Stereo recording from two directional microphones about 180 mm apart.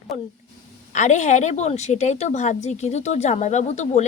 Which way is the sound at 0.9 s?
45° left (ahead or behind).